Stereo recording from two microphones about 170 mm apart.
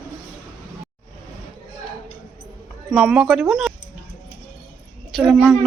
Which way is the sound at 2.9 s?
5° right (ahead or behind).